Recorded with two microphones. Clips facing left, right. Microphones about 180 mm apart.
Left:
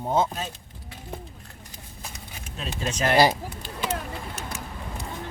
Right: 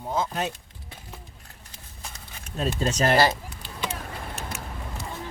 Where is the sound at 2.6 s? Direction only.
35° right (ahead or behind).